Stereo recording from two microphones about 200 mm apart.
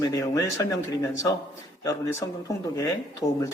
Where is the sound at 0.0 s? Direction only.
15° left (ahead or behind).